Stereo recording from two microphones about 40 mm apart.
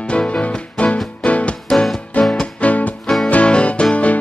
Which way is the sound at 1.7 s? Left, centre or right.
Centre.